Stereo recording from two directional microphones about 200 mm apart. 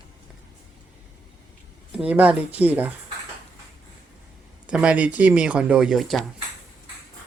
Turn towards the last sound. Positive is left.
turn(degrees=0)  # may be behind; listen again after turning